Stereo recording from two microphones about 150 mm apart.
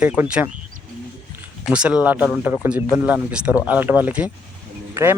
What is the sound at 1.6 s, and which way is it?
Speech, 5° right (ahead or behind).